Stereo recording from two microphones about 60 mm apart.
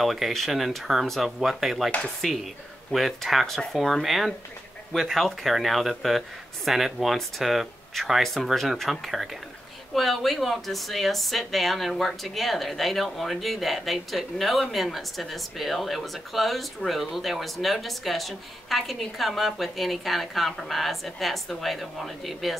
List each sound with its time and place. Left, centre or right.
0.0 s speech: centre
1.9 s speech: centre
2.9 s speech: centre